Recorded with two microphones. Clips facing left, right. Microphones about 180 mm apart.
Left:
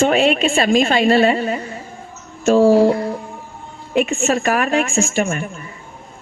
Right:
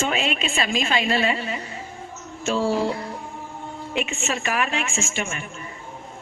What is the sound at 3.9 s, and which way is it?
A woman's voice, 55° left (ahead or behind).